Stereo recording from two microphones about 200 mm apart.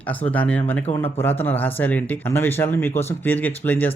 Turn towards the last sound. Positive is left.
turn(degrees=10)  # may be behind; listen again after turning